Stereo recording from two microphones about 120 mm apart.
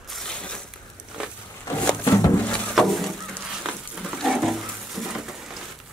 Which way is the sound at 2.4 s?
5° left (ahead or behind).